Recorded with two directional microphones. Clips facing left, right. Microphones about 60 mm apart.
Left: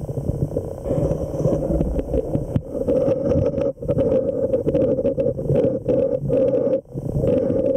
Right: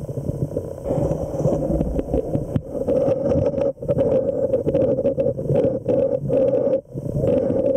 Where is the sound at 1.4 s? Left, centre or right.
Centre.